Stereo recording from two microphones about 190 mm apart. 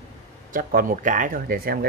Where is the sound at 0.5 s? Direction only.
45° right (ahead or behind).